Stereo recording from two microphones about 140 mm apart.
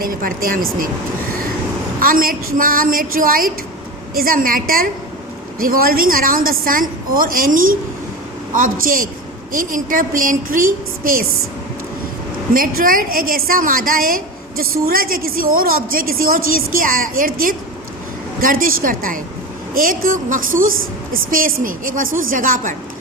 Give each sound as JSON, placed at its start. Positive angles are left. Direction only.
{"t": 0.0, "sound": "a woman's voice", "side_deg": -90}
{"t": 2.0, "sound": "a woman's voice", "side_deg": -90}
{"t": 12.5, "sound": "a woman's voice", "side_deg": -90}